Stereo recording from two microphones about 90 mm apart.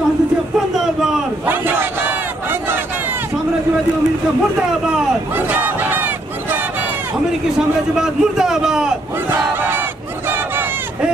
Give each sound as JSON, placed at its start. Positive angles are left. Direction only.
{"t": 1.5, "sound": "battle cry", "side_deg": -25}
{"t": 5.5, "sound": "battle cry", "side_deg": -20}
{"t": 8.0, "sound": "a man's voice", "side_deg": -5}
{"t": 9.3, "sound": "battle cry", "side_deg": -25}